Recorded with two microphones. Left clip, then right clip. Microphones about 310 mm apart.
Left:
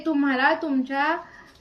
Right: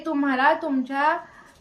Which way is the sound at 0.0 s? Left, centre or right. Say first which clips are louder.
Right 1 dB; centre.